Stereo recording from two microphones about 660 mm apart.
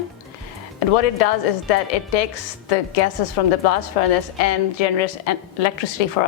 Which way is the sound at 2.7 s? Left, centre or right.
Left.